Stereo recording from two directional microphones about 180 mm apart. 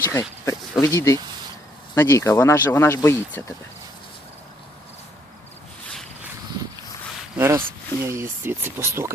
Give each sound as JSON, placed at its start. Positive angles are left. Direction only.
{"t": 0.0, "sound": "speech", "side_deg": 15}
{"t": 7.3, "sound": "speech", "side_deg": -15}